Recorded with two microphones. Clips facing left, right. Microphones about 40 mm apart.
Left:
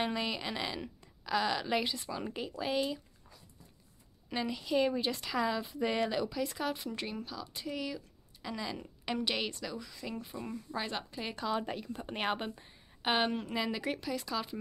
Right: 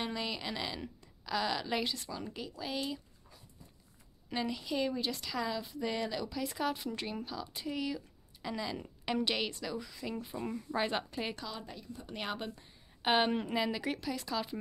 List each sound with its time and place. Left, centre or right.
0.0 s a woman's voice: centre
2.2 s speech: left
2.7 s a woman's voice: centre
4.3 s a woman's voice: centre
6.3 s speech: centre
10.7 s a woman's voice: centre
11.6 s a woman's voice: left
12.1 s speech: left
13.0 s a woman's voice: centre